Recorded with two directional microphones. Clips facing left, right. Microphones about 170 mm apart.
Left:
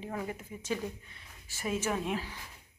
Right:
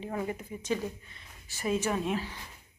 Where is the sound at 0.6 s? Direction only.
10° left (ahead or behind).